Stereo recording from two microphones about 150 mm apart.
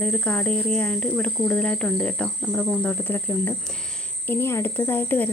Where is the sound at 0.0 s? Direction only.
10° left (ahead or behind).